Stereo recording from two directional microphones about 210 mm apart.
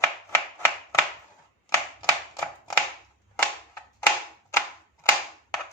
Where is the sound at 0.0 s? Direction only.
10° left (ahead or behind).